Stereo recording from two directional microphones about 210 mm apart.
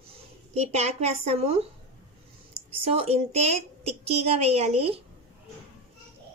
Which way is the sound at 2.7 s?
30° right (ahead or behind).